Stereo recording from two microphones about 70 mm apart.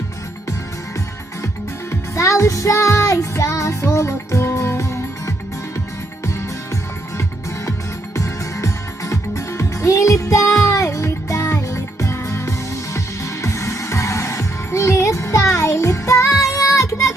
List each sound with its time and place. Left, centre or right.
1.9 s music: left
8.1 s music: left